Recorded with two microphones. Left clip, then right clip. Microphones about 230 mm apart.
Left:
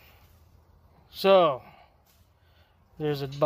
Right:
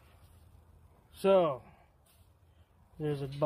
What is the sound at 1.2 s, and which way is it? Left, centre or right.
Speech, left.